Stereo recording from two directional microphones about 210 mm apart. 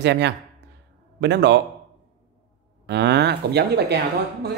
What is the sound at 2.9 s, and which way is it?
Speech, 55° right (ahead or behind).